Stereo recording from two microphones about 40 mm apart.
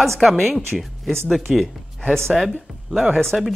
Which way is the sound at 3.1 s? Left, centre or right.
Centre.